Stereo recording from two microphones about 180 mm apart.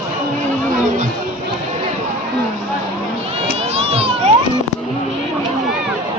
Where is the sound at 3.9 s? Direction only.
35° right (ahead or behind).